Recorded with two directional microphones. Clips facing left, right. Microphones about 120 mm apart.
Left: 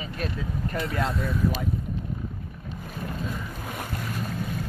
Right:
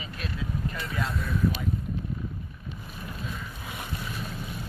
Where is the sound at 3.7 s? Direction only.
45° left (ahead or behind).